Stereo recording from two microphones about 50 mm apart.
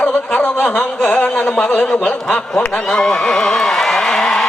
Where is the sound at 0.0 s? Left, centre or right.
Left.